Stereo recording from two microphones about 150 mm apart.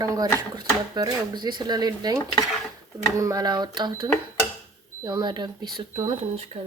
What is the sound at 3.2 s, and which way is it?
Speech, 25° right (ahead or behind).